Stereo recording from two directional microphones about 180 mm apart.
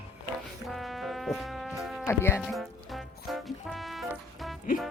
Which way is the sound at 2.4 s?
Centre (ahead or behind).